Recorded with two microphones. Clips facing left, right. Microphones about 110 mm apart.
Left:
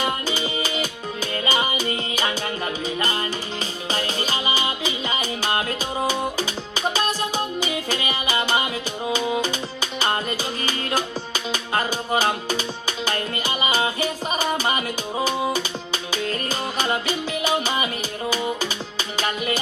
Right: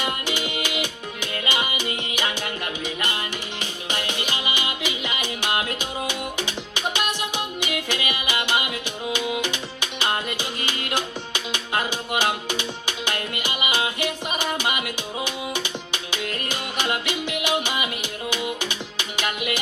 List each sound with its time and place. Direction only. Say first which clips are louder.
1.5 s music: left 3 dB; 30° left (ahead or behind)
3.9 s music: left 3 dB; 30° left (ahead or behind)
7.6 s music: left 2 dB; 30° left (ahead or behind)